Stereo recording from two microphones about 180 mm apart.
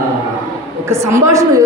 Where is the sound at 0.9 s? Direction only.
15° right (ahead or behind).